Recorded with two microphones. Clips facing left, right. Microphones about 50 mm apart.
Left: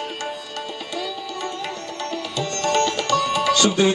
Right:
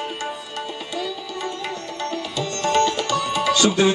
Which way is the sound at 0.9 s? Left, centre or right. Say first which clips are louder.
Even; centre.